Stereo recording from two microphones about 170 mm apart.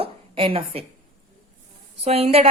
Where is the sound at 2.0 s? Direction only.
35° right (ahead or behind).